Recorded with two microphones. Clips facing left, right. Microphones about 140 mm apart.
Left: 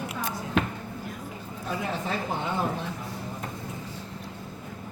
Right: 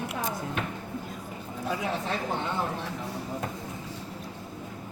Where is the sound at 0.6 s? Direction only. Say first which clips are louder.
Left 11 dB; 90° left.